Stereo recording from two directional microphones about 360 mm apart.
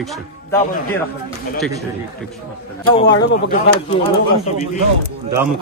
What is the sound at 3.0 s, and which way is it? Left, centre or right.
Speech, left.